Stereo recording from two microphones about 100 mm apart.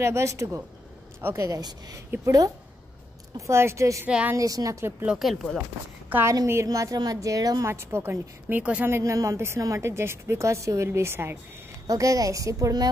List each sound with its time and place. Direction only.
0.0 s a woman's voice: 30° right (ahead or behind)
5.0 s speech: 5° right (ahead or behind)
6.2 s a woman's voice: 30° right (ahead or behind)
7.7 s a woman's voice: 25° right (ahead or behind)
8.8 s a woman's voice: 30° right (ahead or behind)
11.9 s a woman's voice: 35° right (ahead or behind)